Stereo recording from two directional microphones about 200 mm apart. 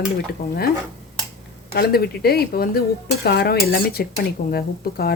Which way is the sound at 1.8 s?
50° left (ahead or behind).